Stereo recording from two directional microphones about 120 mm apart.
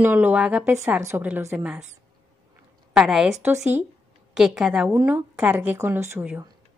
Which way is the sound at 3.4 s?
20° right (ahead or behind).